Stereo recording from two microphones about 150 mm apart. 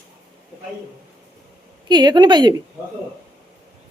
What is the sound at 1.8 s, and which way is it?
Speech, 30° right (ahead or behind).